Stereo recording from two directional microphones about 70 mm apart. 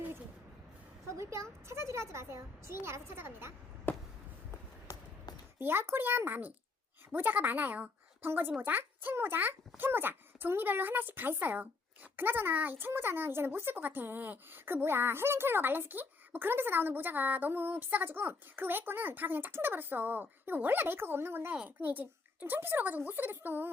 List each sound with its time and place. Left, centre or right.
1.1 s a woman's voice: right
3.9 s a sound: left
5.5 s a woman's voice: right